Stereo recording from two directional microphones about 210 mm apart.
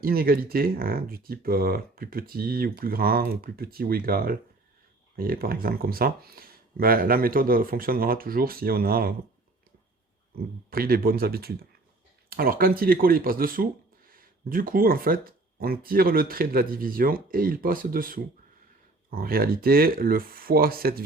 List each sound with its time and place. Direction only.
0.0 s speech: 45° right (ahead or behind)
10.7 s speech: 45° right (ahead or behind)